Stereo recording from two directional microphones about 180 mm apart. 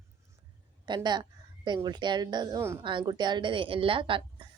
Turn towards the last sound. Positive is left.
turn(degrees=-30)  # may be behind; listen again after turning